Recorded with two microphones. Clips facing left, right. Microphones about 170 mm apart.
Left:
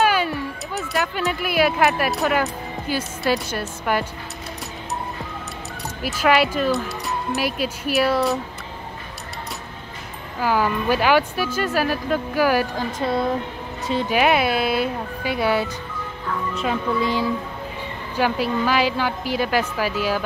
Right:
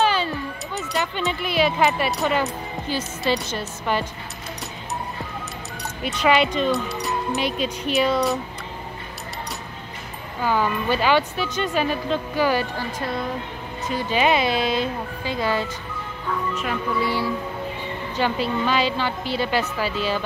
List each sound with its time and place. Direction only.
0.1 s a sound: 10° left (ahead or behind)
0.7 s speech: centre (ahead or behind)
6.0 s speech: 5° left (ahead or behind)
10.4 s speech: 10° left (ahead or behind)
14.0 s speech: 10° left (ahead or behind)
16.5 s music: 20° left (ahead or behind)
18.1 s speech: 10° left (ahead or behind)